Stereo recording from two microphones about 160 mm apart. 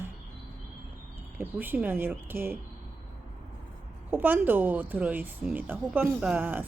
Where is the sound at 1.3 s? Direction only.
10° right (ahead or behind).